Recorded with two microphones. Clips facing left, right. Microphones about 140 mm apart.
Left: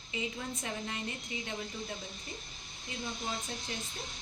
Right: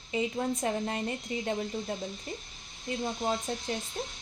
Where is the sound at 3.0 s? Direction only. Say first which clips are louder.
Right 7 dB; 45° right (ahead or behind).